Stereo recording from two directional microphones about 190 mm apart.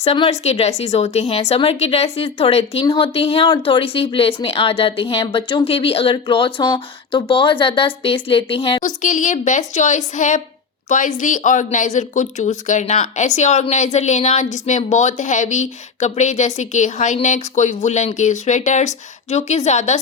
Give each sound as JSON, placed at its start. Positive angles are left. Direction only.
{"t": 0.0, "sound": "speech", "side_deg": 30}
{"t": 9.0, "sound": "a woman's voice", "side_deg": 40}